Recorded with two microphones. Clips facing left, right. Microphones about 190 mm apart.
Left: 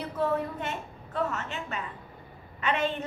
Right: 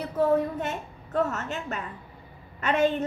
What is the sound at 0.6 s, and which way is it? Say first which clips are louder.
A woman's voice: right 3 dB; 45° right (ahead or behind).